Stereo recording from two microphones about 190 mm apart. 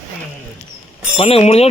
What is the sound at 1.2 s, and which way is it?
Speech, 30° left (ahead or behind).